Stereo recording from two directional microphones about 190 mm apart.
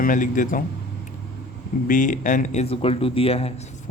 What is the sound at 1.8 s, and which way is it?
Speech, 45° left (ahead or behind).